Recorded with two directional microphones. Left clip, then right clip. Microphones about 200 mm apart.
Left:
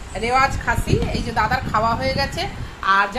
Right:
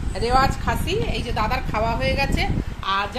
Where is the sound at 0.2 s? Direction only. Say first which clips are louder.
Left 2 dB; 40° right (ahead or behind).